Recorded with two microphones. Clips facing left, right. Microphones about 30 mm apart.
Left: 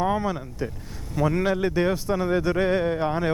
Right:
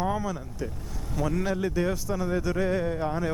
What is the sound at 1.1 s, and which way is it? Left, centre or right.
Speech, left.